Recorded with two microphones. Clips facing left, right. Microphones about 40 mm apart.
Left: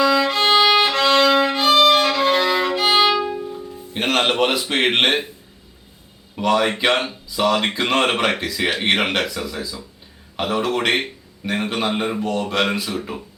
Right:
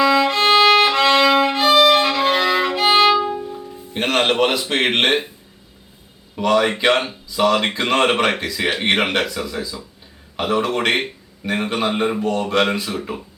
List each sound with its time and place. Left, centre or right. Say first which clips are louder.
0.0 s violin: right 2 dB; centre
3.3 s music: even; centre
6.3 s speech: right 1 dB; centre